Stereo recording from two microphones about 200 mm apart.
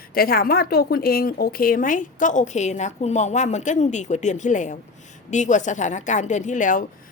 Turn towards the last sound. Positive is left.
turn(degrees=40)  # may be behind; listen again after turning